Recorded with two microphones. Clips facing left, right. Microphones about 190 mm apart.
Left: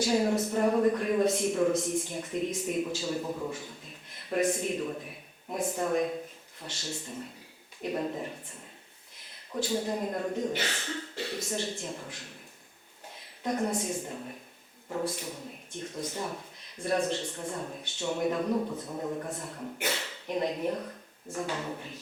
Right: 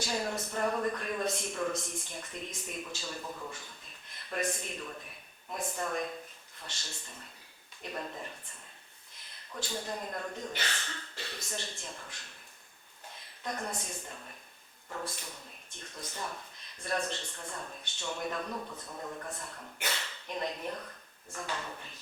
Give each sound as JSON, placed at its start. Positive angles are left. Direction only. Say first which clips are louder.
{"t": 0.0, "sound": "speech", "louder": "left 9 dB", "side_deg": 5}
{"t": 3.2, "sound": "speech", "louder": "left 8 dB", "side_deg": 25}
{"t": 3.5, "sound": "a man's voice", "louder": "left 8 dB", "side_deg": 5}
{"t": 9.1, "sound": "a sound", "louder": "left 2 dB", "side_deg": 5}
{"t": 9.6, "sound": "speech", "louder": "left 8 dB", "side_deg": 5}
{"t": 18.5, "sound": "speech", "louder": "left 10 dB", "side_deg": 25}
{"t": 19.4, "sound": "speech", "louder": "left 7 dB", "side_deg": 10}